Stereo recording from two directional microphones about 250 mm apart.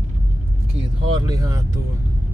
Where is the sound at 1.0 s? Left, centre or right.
Centre.